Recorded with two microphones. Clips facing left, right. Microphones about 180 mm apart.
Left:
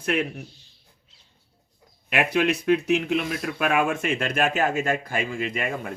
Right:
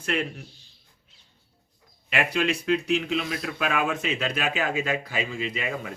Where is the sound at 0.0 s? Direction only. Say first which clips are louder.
Left 3 dB; 55° left (ahead or behind).